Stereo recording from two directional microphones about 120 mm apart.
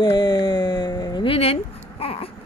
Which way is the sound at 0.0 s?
35° left (ahead or behind).